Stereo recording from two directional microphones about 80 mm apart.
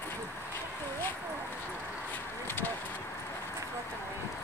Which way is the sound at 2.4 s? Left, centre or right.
Left.